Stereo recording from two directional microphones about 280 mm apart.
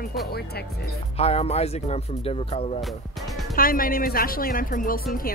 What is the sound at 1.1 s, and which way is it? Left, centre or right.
Speech, left.